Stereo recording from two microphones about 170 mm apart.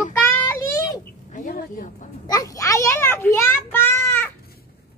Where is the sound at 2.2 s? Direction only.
20° left (ahead or behind).